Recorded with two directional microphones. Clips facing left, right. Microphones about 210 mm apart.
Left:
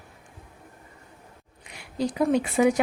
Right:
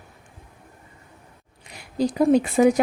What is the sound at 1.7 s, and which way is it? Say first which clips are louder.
Speech: right 4 dB; 40° right (ahead or behind).